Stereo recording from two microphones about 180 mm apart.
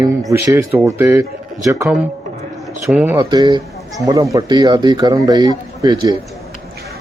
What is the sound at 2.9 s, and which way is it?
Speech, 5° right (ahead or behind).